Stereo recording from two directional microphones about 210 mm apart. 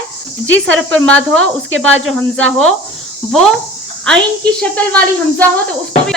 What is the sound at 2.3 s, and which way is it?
Speech, 75° right (ahead or behind).